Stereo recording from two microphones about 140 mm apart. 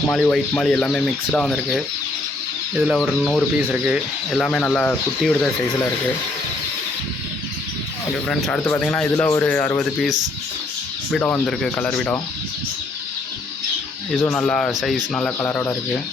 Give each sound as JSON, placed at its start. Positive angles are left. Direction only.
{"t": 0.1, "sound": "speech", "side_deg": 5}
{"t": 3.6, "sound": "speech", "side_deg": -10}
{"t": 4.3, "sound": "speech", "side_deg": 5}
{"t": 8.3, "sound": "speech", "side_deg": 5}
{"t": 11.2, "sound": "speech", "side_deg": 5}
{"t": 14.2, "sound": "speech", "side_deg": 15}
{"t": 14.4, "sound": "speech", "side_deg": 5}